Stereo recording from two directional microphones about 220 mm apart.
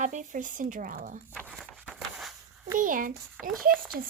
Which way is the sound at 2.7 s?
40° right (ahead or behind).